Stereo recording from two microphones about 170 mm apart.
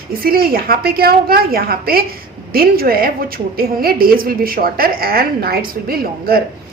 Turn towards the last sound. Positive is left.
turn(degrees=-60)  # may be behind; listen again after turning